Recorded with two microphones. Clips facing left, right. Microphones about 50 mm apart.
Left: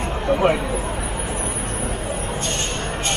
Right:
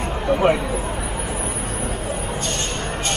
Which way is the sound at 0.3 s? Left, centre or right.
Centre.